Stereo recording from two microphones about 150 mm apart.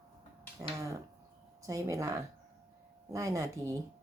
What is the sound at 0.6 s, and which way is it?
A woman's voice, 20° right (ahead or behind).